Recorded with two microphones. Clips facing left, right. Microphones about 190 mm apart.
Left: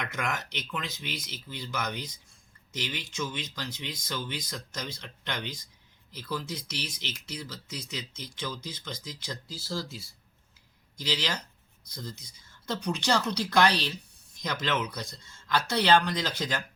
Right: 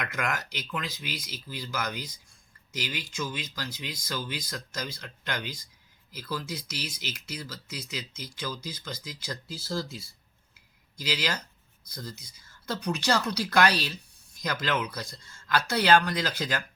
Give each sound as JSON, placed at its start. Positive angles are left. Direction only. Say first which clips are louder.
{"t": 0.0, "sound": "speech", "louder": "right 1 dB", "side_deg": 0}
{"t": 9.5, "sound": "speech", "louder": "right 3 dB", "side_deg": -15}
{"t": 11.9, "sound": "speech", "louder": "even", "side_deg": 0}